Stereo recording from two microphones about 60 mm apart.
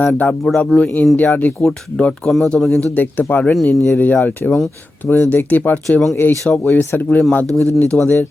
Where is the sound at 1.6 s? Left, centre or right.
Centre.